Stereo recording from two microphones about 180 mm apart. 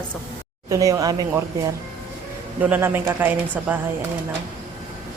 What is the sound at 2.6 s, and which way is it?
Speech, 10° right (ahead or behind).